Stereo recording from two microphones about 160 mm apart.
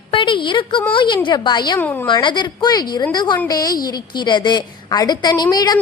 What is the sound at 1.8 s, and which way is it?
Speech, 10° left (ahead or behind).